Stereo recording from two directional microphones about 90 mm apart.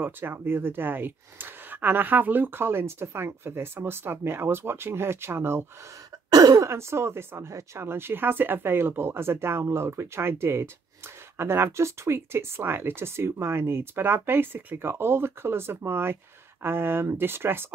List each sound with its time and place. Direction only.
0.0 s speech: 25° right (ahead or behind)
6.3 s speech: 45° right (ahead or behind)
6.7 s speech: 30° right (ahead or behind)